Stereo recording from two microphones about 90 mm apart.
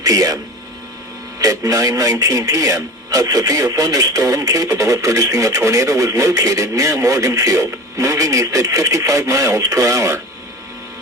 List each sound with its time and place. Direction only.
0.0 s speech: 40° right (ahead or behind)
1.4 s speech: 40° right (ahead or behind)